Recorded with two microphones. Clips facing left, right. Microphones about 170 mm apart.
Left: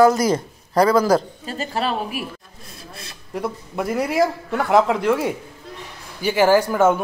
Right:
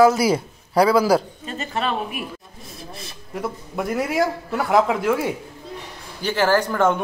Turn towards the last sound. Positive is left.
turn(degrees=10)  # may be behind; listen again after turning